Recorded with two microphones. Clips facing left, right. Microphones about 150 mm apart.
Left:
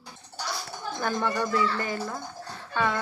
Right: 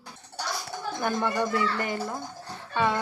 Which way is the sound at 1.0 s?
15° right (ahead or behind).